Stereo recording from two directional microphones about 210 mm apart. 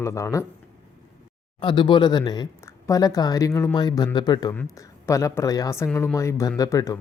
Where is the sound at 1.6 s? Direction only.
20° left (ahead or behind).